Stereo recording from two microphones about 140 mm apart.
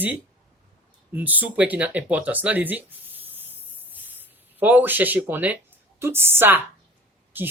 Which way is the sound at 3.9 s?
10° right (ahead or behind).